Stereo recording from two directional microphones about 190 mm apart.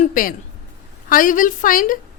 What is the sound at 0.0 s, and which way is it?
A woman's voice, 45° left (ahead or behind).